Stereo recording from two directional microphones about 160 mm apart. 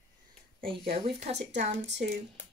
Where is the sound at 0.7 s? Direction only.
35° right (ahead or behind).